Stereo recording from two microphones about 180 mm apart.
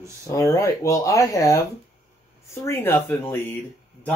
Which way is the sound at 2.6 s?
15° left (ahead or behind).